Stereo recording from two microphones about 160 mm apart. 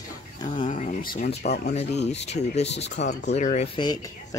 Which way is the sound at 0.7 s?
50° left (ahead or behind).